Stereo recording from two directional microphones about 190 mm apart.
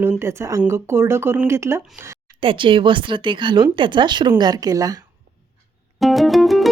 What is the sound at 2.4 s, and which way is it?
Speech, 25° right (ahead or behind).